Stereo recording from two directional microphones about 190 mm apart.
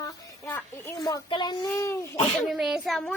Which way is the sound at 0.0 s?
15° left (ahead or behind).